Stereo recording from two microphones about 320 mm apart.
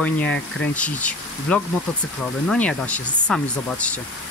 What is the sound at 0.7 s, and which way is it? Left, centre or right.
Speech, centre.